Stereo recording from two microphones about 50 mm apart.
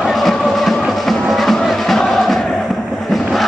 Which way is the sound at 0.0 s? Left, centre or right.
Centre.